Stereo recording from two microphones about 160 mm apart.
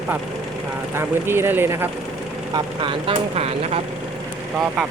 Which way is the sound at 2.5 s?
30° right (ahead or behind).